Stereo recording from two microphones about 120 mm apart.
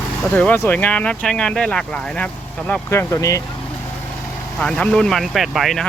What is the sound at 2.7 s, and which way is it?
Speech, 20° left (ahead or behind).